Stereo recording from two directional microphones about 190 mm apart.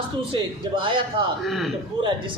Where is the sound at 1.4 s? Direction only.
Centre (ahead or behind).